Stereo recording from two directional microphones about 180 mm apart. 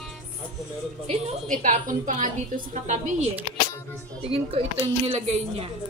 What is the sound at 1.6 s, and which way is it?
A woman's voice, 45° right (ahead or behind).